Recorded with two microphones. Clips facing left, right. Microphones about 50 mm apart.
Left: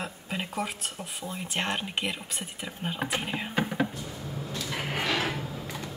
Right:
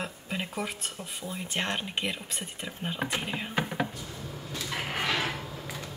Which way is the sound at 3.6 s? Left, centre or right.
Centre.